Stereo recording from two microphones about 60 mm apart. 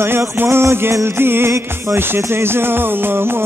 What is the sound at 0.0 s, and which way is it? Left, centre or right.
Music, right.